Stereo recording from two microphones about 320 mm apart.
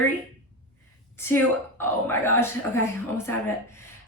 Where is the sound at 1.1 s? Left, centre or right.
Centre.